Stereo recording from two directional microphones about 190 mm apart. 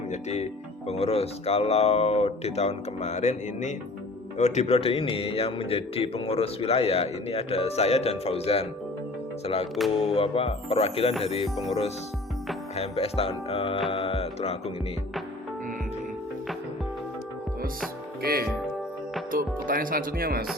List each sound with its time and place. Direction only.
0.1 s a man's voice: 35° left (ahead or behind)
12.7 s speech: 30° left (ahead or behind)
13.9 s music: 30° left (ahead or behind)
18.2 s speech: 50° right (ahead or behind)